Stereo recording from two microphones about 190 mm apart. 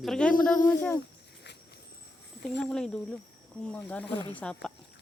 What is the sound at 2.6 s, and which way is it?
Speech, 5° left (ahead or behind).